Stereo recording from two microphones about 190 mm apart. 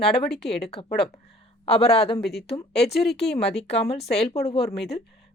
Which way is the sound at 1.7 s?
30° left (ahead or behind).